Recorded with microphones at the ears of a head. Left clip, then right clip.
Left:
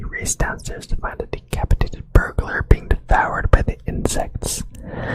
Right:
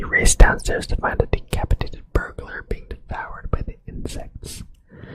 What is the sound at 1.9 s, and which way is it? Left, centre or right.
Speech, left.